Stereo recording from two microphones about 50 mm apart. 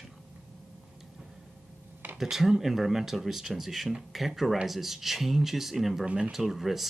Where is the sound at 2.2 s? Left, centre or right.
Centre.